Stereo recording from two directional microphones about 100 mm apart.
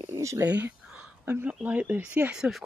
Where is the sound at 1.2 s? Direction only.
20° right (ahead or behind).